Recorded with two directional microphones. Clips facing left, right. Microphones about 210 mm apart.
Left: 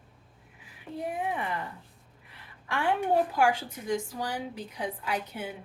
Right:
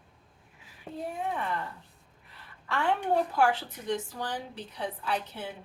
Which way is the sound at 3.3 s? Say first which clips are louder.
Even; 15° left (ahead or behind).